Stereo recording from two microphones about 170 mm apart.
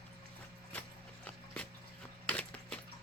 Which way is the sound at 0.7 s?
5° left (ahead or behind).